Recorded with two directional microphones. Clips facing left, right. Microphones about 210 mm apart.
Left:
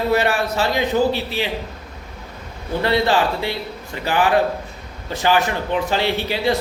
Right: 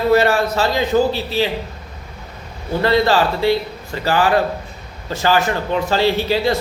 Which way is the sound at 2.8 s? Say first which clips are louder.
Right 3 dB; 15° left (ahead or behind).